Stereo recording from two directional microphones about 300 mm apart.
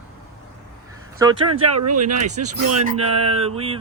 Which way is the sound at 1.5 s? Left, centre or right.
Right.